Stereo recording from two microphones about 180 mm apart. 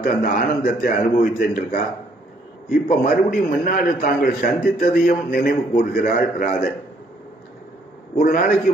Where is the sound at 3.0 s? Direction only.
50° left (ahead or behind).